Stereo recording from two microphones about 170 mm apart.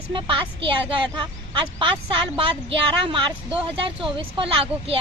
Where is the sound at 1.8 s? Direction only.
30° right (ahead or behind).